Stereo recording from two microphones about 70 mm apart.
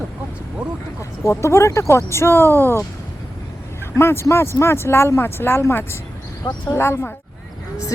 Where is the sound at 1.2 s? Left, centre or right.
Left.